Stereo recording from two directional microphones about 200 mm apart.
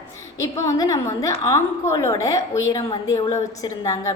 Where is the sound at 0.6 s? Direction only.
15° left (ahead or behind).